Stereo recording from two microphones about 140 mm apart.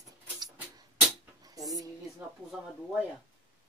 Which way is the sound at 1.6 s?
25° right (ahead or behind).